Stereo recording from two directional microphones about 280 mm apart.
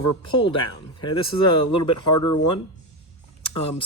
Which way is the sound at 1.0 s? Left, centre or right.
Centre.